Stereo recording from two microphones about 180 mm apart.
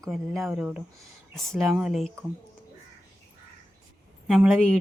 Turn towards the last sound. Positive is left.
turn(degrees=0)  # may be behind; listen again after turning